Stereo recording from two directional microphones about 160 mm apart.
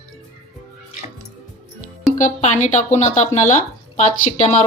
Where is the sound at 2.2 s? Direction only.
50° left (ahead or behind).